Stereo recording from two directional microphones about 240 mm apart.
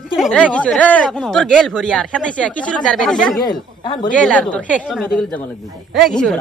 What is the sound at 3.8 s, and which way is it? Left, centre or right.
Speech, left.